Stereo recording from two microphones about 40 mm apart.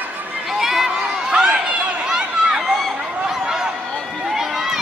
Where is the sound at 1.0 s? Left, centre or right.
Right.